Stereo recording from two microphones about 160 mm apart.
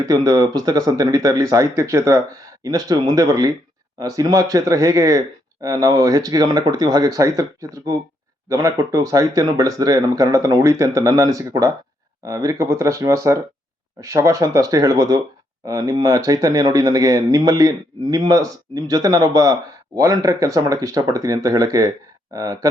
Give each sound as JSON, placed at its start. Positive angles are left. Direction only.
{"t": 0.0, "sound": "speech", "side_deg": -20}